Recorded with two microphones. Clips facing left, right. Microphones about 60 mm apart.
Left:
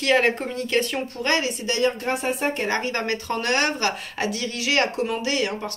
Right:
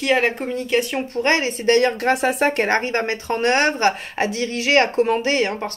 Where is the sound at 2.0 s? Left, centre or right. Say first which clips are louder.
Right 6 dB; right.